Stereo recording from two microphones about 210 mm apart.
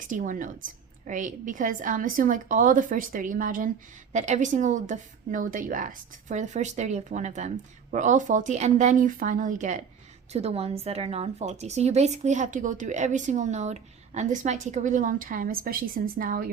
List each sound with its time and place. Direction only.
0.1 s a woman's voice: 40° right (ahead or behind)